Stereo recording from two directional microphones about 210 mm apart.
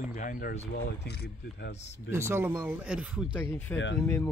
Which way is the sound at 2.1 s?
10° right (ahead or behind).